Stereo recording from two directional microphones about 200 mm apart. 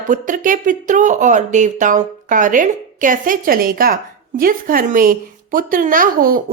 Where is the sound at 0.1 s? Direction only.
40° right (ahead or behind).